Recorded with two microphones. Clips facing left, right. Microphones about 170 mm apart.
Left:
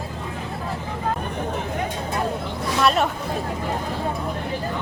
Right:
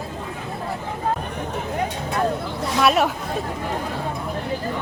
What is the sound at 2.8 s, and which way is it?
Speech, 5° right (ahead or behind).